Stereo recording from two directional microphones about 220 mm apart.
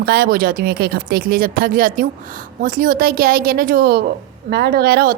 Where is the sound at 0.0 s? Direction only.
45° right (ahead or behind).